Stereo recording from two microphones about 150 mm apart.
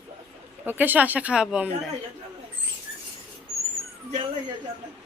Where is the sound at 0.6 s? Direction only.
10° right (ahead or behind).